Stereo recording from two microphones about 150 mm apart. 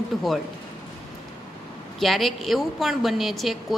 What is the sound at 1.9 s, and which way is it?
A woman's voice, centre (ahead or behind).